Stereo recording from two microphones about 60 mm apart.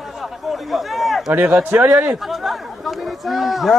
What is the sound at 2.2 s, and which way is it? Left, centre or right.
Speech, centre.